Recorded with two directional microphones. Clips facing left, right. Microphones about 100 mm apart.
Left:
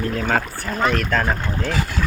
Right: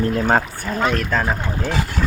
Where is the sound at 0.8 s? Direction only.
5° right (ahead or behind).